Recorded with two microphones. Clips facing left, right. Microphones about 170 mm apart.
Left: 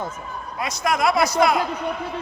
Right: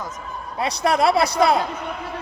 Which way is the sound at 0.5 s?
30° right (ahead or behind).